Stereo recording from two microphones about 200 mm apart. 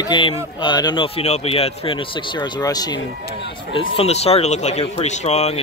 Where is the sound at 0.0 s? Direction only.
25° left (ahead or behind).